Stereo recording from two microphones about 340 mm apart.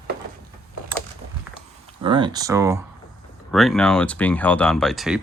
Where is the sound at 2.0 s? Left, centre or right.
Centre.